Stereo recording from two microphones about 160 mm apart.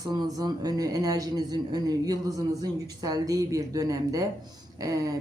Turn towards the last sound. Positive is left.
turn(degrees=-20)  # may be behind; listen again after turning